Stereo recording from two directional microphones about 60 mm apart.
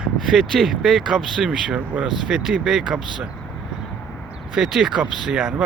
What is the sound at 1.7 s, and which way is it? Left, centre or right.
Speech, right.